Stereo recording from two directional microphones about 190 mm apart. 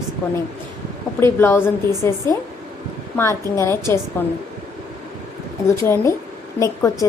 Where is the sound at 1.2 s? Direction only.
10° left (ahead or behind).